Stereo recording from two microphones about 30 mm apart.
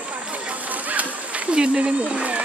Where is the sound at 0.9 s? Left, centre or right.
Right.